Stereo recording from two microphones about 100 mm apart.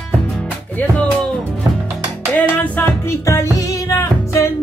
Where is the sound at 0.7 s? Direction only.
10° left (ahead or behind).